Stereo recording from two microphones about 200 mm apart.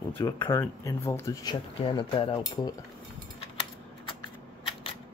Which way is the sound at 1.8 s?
25° left (ahead or behind).